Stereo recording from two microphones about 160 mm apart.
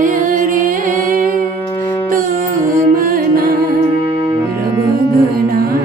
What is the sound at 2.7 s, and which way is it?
Music, 60° right (ahead or behind).